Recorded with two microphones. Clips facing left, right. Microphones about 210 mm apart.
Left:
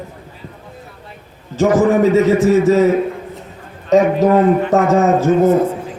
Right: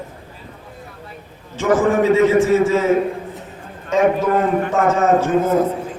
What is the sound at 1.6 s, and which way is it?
A man's voice, 40° left (ahead or behind).